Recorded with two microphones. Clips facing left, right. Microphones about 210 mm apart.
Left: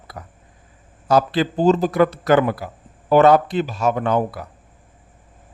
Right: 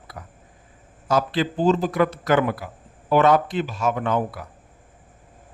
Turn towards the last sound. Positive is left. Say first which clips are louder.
# left 4 dB
turn(degrees=35)  # may be behind; listen again after turning